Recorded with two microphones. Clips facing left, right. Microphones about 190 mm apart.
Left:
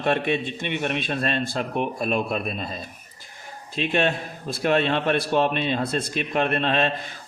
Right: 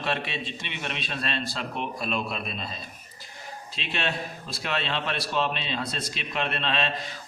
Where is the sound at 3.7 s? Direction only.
50° left (ahead or behind).